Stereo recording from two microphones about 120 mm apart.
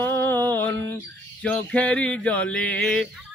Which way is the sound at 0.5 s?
15° left (ahead or behind).